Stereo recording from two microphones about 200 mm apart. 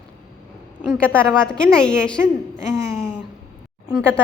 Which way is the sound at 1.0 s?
5° left (ahead or behind).